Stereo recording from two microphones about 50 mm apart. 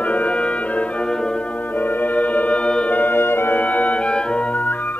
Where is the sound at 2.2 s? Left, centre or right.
Left.